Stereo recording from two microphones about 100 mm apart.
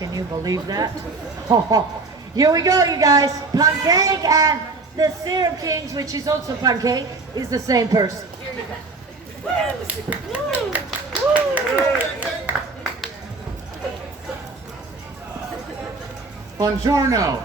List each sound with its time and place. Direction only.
0.0 s a woman's voice: 35° right (ahead or behind)
9.8 s speech: 15° right (ahead or behind)
16.6 s a woman's voice: 35° right (ahead or behind)